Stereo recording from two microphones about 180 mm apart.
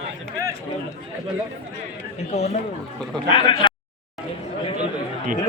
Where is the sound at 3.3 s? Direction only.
30° left (ahead or behind).